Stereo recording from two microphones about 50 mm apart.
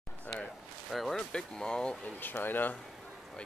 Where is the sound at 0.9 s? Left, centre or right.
Centre.